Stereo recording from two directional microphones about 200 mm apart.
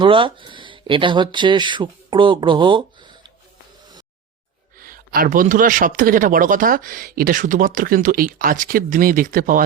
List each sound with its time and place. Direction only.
0.0 s speech: 25° right (ahead or behind)
4.9 s speech: 45° right (ahead or behind)